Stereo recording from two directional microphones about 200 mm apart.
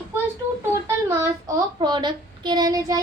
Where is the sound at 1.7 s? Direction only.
20° right (ahead or behind).